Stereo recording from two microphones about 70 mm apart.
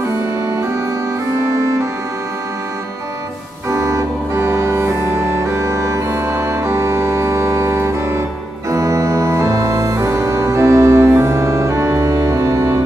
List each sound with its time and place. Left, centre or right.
3.7 s organ: right
10.0 s music: right